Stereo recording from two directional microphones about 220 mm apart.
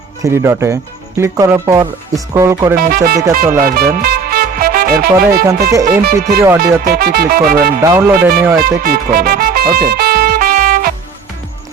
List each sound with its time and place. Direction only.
0.2 s speech: 10° right (ahead or behind)
2.7 s speech: 40° right (ahead or behind)
6.6 s music: 45° right (ahead or behind)
7.9 s speech: 10° right (ahead or behind)
8.8 s music: 40° right (ahead or behind)